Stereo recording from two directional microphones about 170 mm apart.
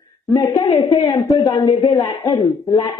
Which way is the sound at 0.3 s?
20° left (ahead or behind).